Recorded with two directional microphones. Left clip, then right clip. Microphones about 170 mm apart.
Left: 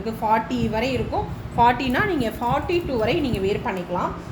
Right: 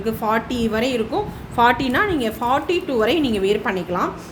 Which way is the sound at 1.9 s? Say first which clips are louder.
Right 3 dB; 25° right (ahead or behind).